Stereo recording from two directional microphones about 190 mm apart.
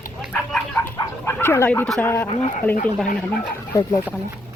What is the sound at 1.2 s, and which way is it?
Speech, 15° left (ahead or behind).